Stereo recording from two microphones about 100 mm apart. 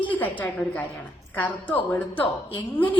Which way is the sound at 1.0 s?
15° left (ahead or behind).